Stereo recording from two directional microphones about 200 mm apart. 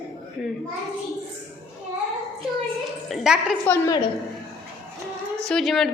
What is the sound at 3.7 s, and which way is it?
Speech, 20° left (ahead or behind).